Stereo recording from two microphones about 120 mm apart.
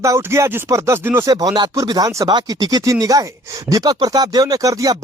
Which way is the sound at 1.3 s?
30° right (ahead or behind).